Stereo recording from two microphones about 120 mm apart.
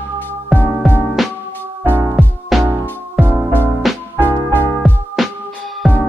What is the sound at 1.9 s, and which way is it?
Music, 20° right (ahead or behind).